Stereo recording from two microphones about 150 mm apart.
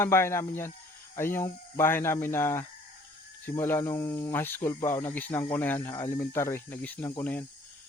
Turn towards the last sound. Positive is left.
turn(degrees=10)  # may be behind; listen again after turning